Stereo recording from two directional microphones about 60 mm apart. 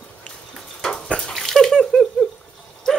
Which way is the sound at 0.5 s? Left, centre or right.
Centre.